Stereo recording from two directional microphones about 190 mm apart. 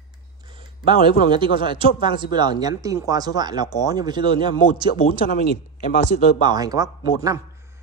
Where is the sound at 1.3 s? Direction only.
25° right (ahead or behind).